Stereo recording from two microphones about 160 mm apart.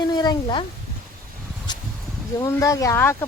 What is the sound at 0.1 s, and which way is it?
Speech, 25° left (ahead or behind).